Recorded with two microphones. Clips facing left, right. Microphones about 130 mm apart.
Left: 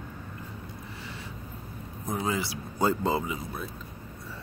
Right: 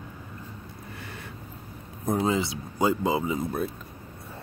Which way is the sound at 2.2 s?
25° right (ahead or behind).